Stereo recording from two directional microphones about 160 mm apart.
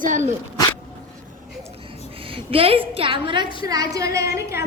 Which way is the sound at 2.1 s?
35° right (ahead or behind).